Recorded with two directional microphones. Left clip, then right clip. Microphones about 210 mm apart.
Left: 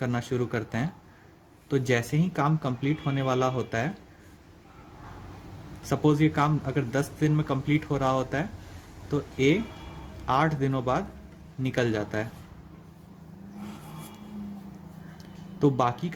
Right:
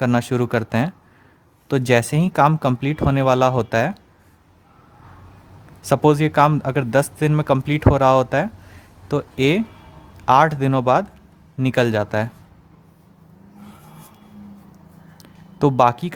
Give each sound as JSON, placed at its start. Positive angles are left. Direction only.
{"t": 0.0, "sound": "speech", "side_deg": -40}
{"t": 5.9, "sound": "speech", "side_deg": -40}
{"t": 15.2, "sound": "a sound", "side_deg": -40}